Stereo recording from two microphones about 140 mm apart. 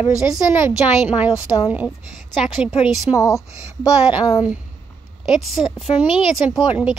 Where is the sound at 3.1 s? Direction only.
20° left (ahead or behind).